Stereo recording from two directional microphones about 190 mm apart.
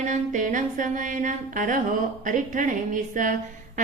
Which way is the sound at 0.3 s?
45° right (ahead or behind).